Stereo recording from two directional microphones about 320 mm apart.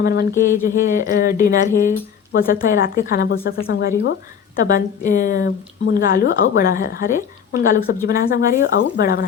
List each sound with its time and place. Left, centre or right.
0.0 s a woman's voice: left